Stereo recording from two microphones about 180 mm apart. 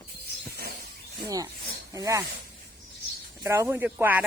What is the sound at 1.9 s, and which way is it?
Speech, 20° right (ahead or behind).